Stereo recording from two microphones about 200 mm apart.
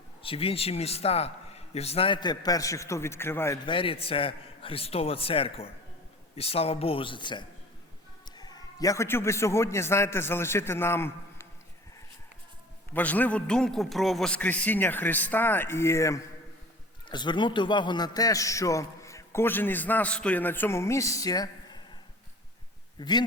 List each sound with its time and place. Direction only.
0.2 s a man's voice: 30° left (ahead or behind); by 3.6 s 10° left (ahead or behind)
3.7 s a man's voice: 25° left (ahead or behind)
12.9 s a man's voice: 10° left (ahead or behind)
23.0 s speech: 20° left (ahead or behind)